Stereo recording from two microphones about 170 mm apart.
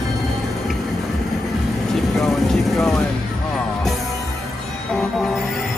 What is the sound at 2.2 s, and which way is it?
Vehicle, centre (ahead or behind).